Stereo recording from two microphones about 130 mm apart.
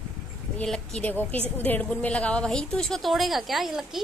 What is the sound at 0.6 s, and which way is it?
A woman's voice, 5° left (ahead or behind).